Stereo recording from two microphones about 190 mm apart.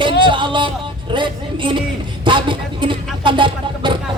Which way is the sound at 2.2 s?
25° right (ahead or behind).